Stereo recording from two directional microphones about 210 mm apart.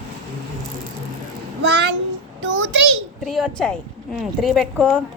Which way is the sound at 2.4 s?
60° right (ahead or behind).